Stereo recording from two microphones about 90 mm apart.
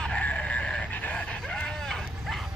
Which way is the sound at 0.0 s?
10° left (ahead or behind).